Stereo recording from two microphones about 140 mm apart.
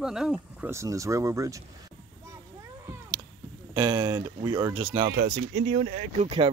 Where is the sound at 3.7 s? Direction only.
30° right (ahead or behind).